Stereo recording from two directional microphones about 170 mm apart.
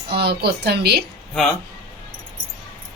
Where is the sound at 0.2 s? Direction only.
75° right (ahead or behind).